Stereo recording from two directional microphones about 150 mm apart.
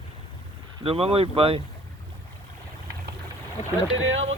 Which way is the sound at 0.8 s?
40° right (ahead or behind).